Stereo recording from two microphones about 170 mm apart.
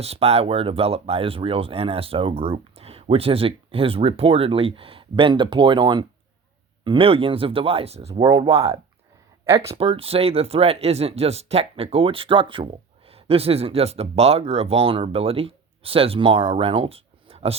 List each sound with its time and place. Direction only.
0.0 s speech: 35° right (ahead or behind)
8.2 s speech: 20° right (ahead or behind)
8.4 s speech: 35° right (ahead or behind)